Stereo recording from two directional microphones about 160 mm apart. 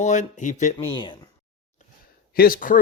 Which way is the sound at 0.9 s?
30° left (ahead or behind).